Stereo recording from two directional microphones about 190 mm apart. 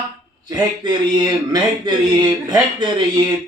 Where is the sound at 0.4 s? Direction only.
20° right (ahead or behind).